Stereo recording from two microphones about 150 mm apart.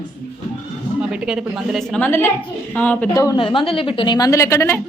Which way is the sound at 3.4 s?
35° left (ahead or behind).